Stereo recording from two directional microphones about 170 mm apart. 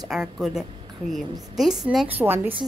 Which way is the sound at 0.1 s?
Centre (ahead or behind).